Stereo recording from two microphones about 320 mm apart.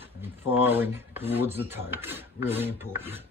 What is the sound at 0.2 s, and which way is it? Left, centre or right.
Speech, centre.